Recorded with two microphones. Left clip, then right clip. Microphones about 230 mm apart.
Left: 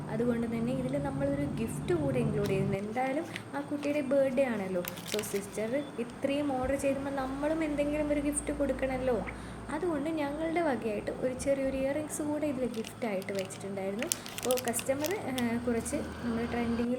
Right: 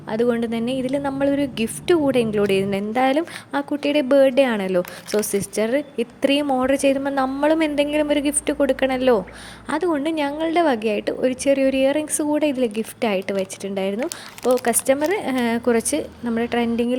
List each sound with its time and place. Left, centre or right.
0.1 s a woman's voice: right